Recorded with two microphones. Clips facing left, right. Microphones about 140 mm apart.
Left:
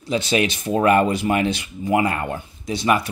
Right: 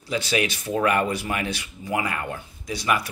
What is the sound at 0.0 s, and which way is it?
A man's voice, 20° left (ahead or behind).